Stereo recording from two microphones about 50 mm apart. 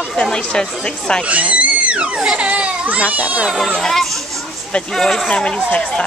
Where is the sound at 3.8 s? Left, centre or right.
Centre.